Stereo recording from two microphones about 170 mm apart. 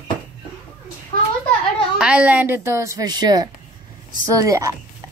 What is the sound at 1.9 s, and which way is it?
A woman's voice, 5° right (ahead or behind).